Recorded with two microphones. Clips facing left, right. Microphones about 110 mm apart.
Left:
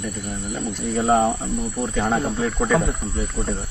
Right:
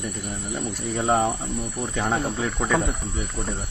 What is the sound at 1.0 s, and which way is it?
Cricket, centre (ahead or behind).